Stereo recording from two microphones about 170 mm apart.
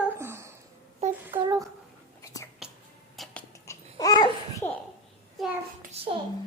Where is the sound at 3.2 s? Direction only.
Centre (ahead or behind).